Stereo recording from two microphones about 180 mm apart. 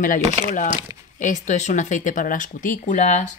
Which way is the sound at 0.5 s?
45° left (ahead or behind).